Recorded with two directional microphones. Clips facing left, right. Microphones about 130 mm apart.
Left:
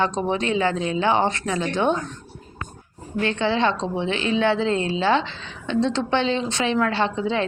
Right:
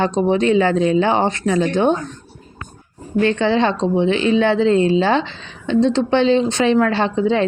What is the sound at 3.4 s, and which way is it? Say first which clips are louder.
Speech: right 5 dB; 50° right (ahead or behind).